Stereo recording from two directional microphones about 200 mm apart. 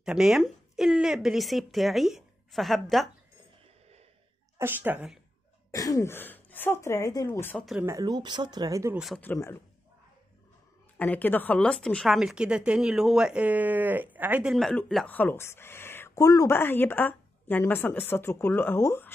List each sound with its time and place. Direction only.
0.0 s speech: 5° right (ahead or behind)
4.6 s speech: 10° right (ahead or behind)
5.7 s a woman's voice: 15° left (ahead or behind)
7.8 s speech: 15° right (ahead or behind)
9.0 s a woman's voice: 5° left (ahead or behind)
11.0 s a woman's voice: 10° left (ahead or behind)